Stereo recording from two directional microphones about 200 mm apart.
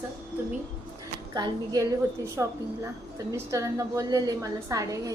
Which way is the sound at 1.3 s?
20° right (ahead or behind).